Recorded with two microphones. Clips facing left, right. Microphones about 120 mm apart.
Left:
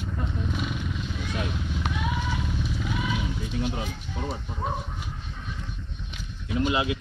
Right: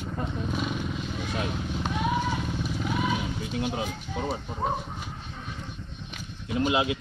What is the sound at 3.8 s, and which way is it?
Speech, 35° right (ahead or behind).